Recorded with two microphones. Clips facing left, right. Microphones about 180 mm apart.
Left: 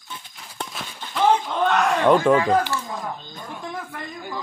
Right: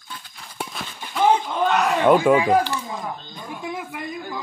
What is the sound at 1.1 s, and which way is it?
Speech, 5° right (ahead or behind).